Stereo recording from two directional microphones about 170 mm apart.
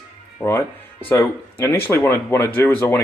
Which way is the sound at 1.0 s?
15° left (ahead or behind).